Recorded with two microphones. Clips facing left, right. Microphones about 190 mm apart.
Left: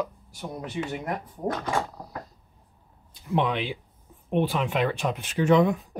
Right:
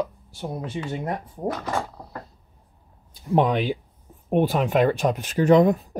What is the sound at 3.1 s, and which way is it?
Speech, 40° right (ahead or behind).